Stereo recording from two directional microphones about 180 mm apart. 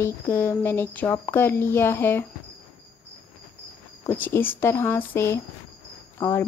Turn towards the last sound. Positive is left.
turn(degrees=15)  # may be behind; listen again after turning